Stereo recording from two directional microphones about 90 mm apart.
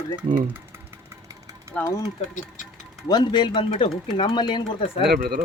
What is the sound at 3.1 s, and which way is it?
Speech, 55° left (ahead or behind).